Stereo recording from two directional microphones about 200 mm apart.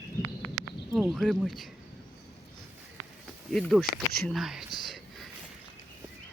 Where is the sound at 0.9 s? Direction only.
Centre (ahead or behind).